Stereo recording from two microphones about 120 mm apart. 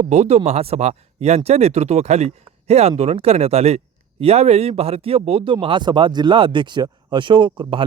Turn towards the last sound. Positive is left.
turn(degrees=-40)  # may be behind; listen again after turning